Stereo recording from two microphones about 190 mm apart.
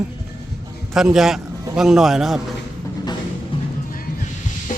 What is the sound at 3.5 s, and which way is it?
Music, 30° left (ahead or behind).